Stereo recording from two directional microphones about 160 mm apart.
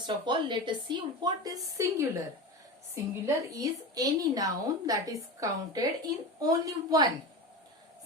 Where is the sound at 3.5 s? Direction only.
20° right (ahead or behind).